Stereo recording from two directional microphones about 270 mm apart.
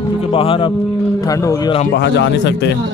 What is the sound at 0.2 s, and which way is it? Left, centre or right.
Speech, centre.